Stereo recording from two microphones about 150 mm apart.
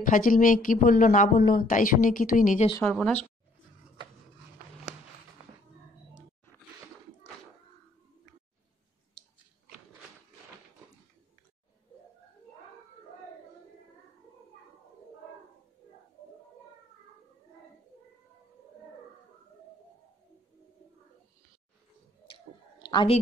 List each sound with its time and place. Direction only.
0.0 s a woman's voice: 65° left (ahead or behind)
2.8 s a woman's voice: 10° left (ahead or behind)
22.3 s a sound: 30° left (ahead or behind)